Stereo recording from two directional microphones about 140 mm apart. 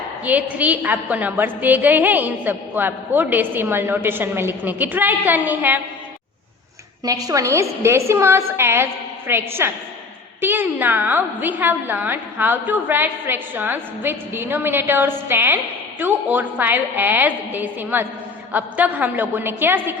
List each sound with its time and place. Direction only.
0.3 s a woman's voice: 10° right (ahead or behind)
7.0 s a woman's voice: 25° right (ahead or behind)